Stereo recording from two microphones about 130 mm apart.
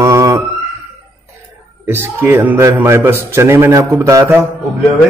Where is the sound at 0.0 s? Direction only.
25° right (ahead or behind).